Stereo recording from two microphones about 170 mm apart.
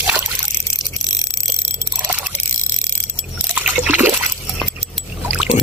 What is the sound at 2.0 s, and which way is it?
Single-lens reflex camera, 10° right (ahead or behind).